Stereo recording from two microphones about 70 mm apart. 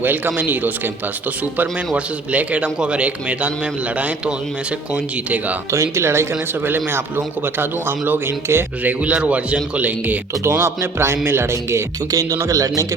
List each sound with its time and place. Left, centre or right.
0.0 s a man's voice: right
2.3 s a man's voice: centre
5.7 s a man's voice: right
8.8 s a man's voice: right
10.4 s a man's voice: right
12.1 s a man's voice: right